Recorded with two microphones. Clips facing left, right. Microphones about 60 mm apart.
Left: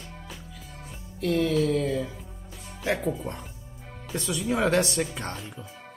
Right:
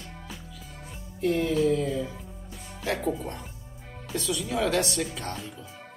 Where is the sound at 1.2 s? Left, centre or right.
Left.